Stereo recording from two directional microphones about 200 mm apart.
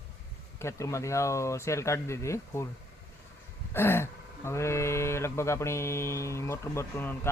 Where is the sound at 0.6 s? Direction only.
15° left (ahead or behind).